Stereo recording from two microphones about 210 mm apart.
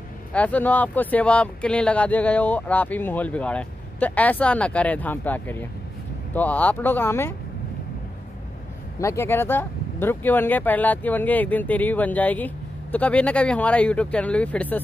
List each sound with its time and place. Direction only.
0.3 s speech: 5° left (ahead or behind)
9.0 s speech: 10° left (ahead or behind)